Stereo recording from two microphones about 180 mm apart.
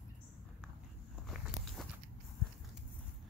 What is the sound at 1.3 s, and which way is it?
Walk, centre (ahead or behind).